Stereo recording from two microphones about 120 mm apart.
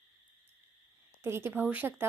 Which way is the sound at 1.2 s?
20° right (ahead or behind).